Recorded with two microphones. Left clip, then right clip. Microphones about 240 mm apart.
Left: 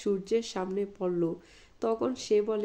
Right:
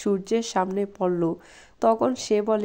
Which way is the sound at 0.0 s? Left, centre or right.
Right.